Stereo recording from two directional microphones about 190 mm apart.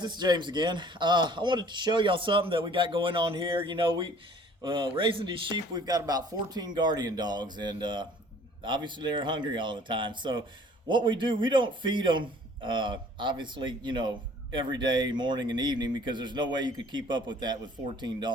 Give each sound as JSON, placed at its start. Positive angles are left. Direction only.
{"t": 0.0, "sound": "a man's voice", "side_deg": -25}